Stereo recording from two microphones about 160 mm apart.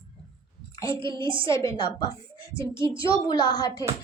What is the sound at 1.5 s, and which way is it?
Speech, 20° left (ahead or behind).